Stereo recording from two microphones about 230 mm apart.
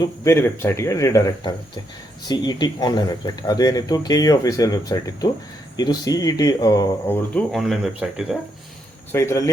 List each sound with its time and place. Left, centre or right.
0.0 s speech: centre
9.1 s speech: centre